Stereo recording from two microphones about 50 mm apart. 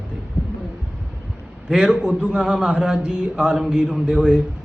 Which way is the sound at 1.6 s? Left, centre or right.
Centre.